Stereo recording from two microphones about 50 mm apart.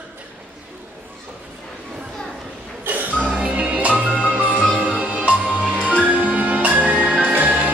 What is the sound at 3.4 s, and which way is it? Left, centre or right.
Music, right.